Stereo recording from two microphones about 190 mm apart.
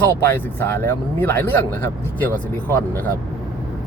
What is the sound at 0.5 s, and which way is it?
Speech, 10° left (ahead or behind).